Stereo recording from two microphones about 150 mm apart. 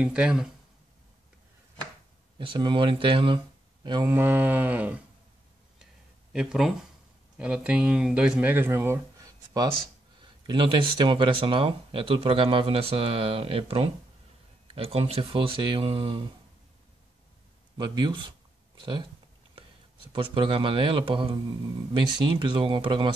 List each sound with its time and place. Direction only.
0.0 s livestock: 10° right (ahead or behind)
2.3 s speech: 35° right (ahead or behind)
4.0 s livestock: 15° right (ahead or behind)
6.3 s speech: 5° right (ahead or behind); by 9.7 s 25° right (ahead or behind)
10.4 s speech: 35° right (ahead or behind)
17.7 s speech: 30° right (ahead or behind)
20.1 s speech: 35° right (ahead or behind)